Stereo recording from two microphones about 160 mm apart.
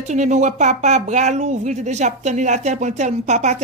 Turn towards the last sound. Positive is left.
turn(degrees=-45)  # may be behind; listen again after turning